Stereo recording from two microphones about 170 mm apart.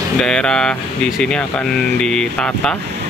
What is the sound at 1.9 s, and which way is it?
Speech, 5° left (ahead or behind).